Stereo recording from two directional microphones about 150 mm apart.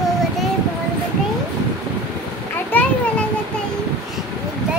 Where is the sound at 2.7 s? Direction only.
10° left (ahead or behind).